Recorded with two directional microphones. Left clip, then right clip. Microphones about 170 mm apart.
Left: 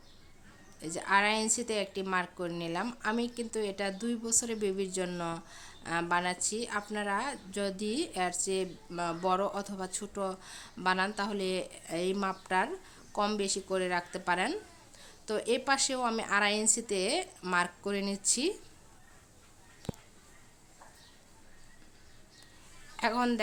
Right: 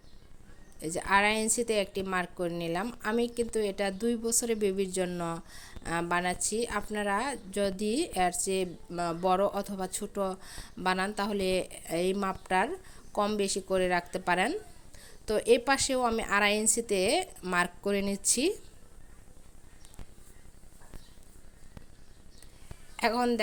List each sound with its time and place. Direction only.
0.8 s a woman's voice: 25° right (ahead or behind)
23.0 s speech: 25° right (ahead or behind)